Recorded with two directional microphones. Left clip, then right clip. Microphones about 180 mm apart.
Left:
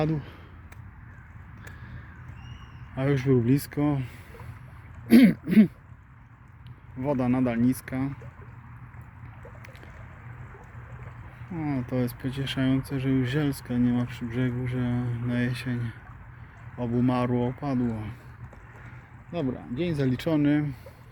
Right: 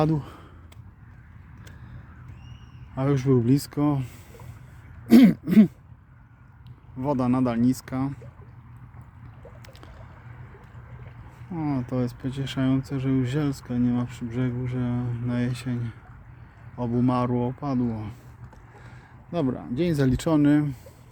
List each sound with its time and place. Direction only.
0.0 s speech: 30° right (ahead or behind)
2.9 s speech: 15° right (ahead or behind)
7.0 s speech: 15° right (ahead or behind)
11.5 s speech: 20° right (ahead or behind)
19.3 s speech: 40° right (ahead or behind)
20.1 s speech: 30° right (ahead or behind)